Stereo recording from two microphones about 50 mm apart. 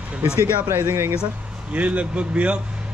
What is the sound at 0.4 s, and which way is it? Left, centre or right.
Speech, right.